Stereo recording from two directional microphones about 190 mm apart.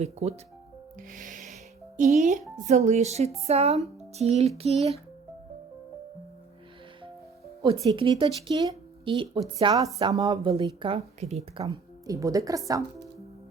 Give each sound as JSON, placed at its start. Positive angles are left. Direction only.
{"t": 0.0, "sound": "speech", "side_deg": -35}
{"t": 1.1, "sound": "music", "side_deg": -45}
{"t": 2.0, "sound": "speech", "side_deg": -40}
{"t": 7.9, "sound": "speech", "side_deg": -30}
{"t": 12.0, "sound": "speech", "side_deg": -15}